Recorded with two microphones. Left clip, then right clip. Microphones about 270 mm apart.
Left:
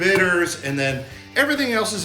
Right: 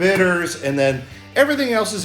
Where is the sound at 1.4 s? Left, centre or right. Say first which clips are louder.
Right 3 dB; centre.